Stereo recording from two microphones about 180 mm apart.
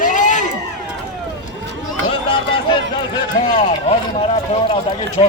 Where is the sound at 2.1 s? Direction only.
30° left (ahead or behind).